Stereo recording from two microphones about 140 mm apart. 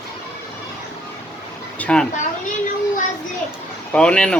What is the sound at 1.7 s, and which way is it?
Speech, 10° left (ahead or behind).